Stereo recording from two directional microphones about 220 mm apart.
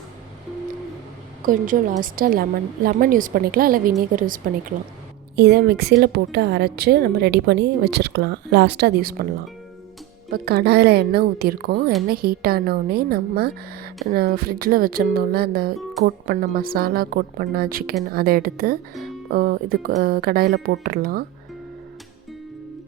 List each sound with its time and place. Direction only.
1.5 s a woman's voice: 35° right (ahead or behind)
10.3 s a woman's voice: 45° right (ahead or behind)